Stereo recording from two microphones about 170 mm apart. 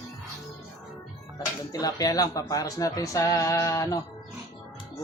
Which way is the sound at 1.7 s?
20° left (ahead or behind).